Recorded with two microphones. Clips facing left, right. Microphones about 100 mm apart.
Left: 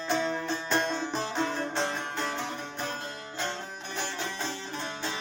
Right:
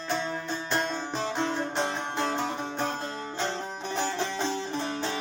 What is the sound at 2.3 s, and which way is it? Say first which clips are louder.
Music: right 5 dB; 35° right (ahead or behind).